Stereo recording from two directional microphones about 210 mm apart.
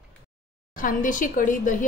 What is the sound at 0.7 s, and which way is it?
A woman's voice, 40° left (ahead or behind).